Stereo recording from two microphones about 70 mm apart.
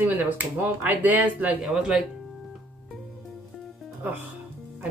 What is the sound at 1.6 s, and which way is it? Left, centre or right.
Speech, centre.